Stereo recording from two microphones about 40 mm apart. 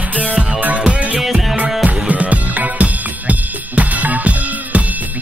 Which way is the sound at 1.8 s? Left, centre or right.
Right.